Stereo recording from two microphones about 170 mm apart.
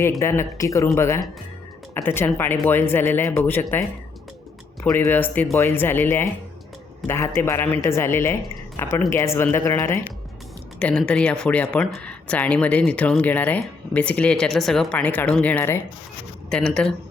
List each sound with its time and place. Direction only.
0.2 s speech: 15° left (ahead or behind)
4.8 s speech: 15° left (ahead or behind)